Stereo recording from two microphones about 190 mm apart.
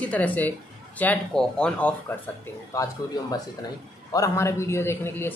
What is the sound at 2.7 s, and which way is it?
Speech, 15° left (ahead or behind).